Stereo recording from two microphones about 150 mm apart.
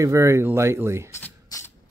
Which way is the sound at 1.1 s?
15° left (ahead or behind).